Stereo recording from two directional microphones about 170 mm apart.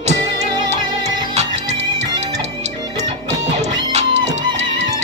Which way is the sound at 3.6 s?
40° right (ahead or behind).